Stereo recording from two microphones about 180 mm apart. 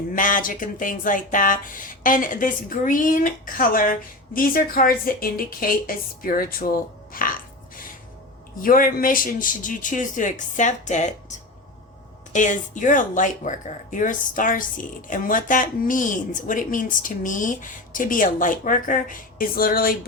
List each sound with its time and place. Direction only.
0.1 s speech: 50° left (ahead or behind)
8.6 s speech: 50° left (ahead or behind)